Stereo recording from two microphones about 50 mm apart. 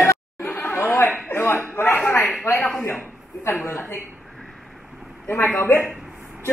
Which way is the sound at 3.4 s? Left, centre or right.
Left.